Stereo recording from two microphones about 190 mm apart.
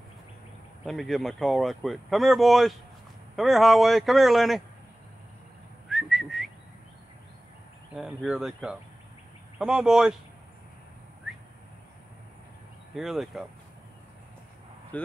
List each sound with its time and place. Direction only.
0.8 s speech: centre (ahead or behind)
5.9 s whistling: centre (ahead or behind)
7.9 s speech: centre (ahead or behind)
12.9 s speech: centre (ahead or behind)